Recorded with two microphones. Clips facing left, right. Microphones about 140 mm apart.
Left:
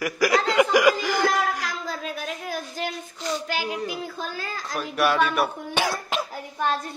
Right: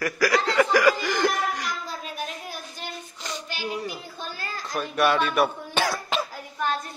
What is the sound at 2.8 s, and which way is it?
Child singing, 90° left.